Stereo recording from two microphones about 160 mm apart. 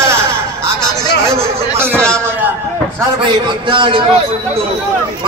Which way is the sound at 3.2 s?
30° right (ahead or behind).